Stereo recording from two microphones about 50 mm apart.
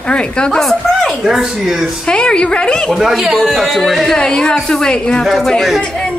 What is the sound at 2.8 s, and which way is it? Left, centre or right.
A man's voice, centre.